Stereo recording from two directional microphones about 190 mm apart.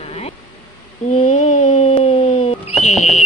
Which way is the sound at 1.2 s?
35° left (ahead or behind).